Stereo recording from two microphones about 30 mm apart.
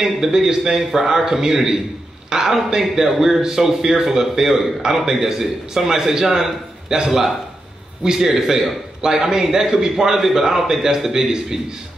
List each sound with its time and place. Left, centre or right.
0.0 s a man's voice: centre